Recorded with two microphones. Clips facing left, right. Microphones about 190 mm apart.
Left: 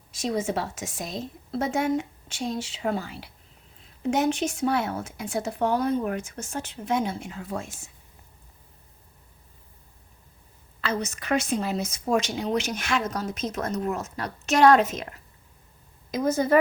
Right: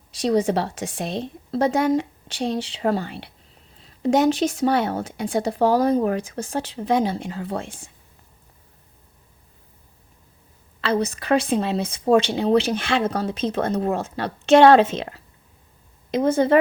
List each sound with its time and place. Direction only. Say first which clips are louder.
0.2 s a woman's voice: right 7 dB; 35° right (ahead or behind)
3.1 s speech: right 5 dB; 70° right (ahead or behind)
3.8 s speech: right 6 dB; 35° right (ahead or behind)
10.8 s a woman's voice: right 7 dB; 30° right (ahead or behind)